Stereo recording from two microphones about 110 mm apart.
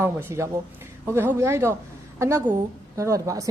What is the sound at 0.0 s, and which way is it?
A woman's voice, 20° right (ahead or behind).